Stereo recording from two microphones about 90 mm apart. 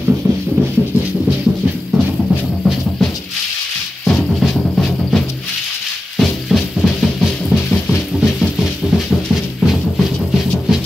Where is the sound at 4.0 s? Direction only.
5° left (ahead or behind).